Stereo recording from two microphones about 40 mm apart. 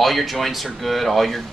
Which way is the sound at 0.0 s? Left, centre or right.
Centre.